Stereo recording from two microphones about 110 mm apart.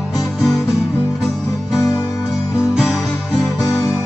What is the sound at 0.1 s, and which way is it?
Music, centre (ahead or behind).